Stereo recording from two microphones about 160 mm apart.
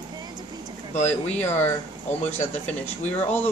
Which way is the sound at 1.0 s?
45° left (ahead or behind).